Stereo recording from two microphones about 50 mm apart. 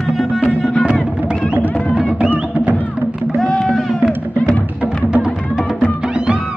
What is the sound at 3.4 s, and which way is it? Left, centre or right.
Music, centre.